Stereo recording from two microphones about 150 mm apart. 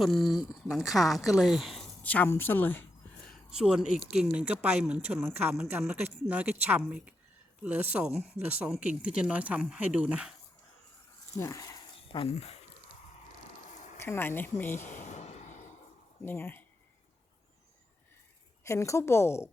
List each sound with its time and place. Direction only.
0.0 s speech: centre (ahead or behind)
2.0 s a woman's voice: 10° left (ahead or behind)
3.5 s speech: 5° right (ahead or behind)
11.3 s speech: 20° left (ahead or behind)
12.0 s speech: 35° left (ahead or behind)
13.7 s a sound: 55° left (ahead or behind)
14.0 s a woman's voice: 15° left (ahead or behind)
14.8 s a sound: 55° left (ahead or behind)
16.2 s speech: 15° left (ahead or behind)
18.6 s a woman's voice: 20° left (ahead or behind)